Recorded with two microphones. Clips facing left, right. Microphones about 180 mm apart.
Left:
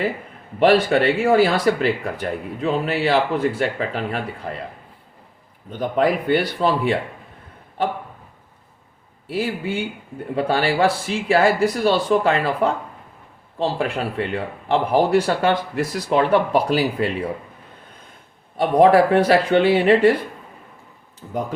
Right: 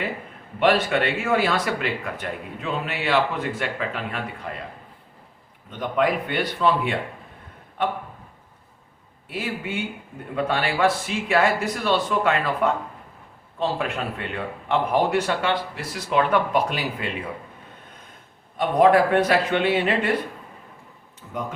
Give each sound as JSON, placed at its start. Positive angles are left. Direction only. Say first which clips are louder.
{"t": 0.6, "sound": "speech", "louder": "left 5 dB", "side_deg": 35}
{"t": 5.8, "sound": "speech", "louder": "left 3 dB", "side_deg": 35}
{"t": 9.3, "sound": "speech", "louder": "left 5 dB", "side_deg": 30}
{"t": 18.5, "sound": "speech", "louder": "left 3 dB", "side_deg": 30}